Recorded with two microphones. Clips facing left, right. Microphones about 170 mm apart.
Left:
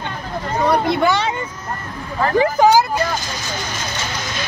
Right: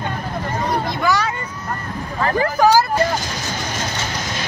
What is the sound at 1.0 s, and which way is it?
Speech, 25° left (ahead or behind).